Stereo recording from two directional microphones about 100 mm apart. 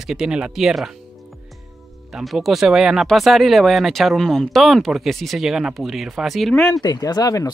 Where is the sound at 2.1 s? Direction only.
Centre (ahead or behind).